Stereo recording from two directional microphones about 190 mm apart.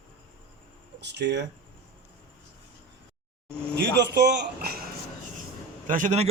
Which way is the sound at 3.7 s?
65° right (ahead or behind).